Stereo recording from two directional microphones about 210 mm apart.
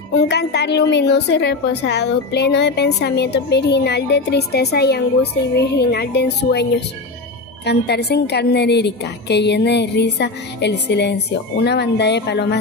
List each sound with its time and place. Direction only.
0.3 s a woman's voice: 50° left (ahead or behind)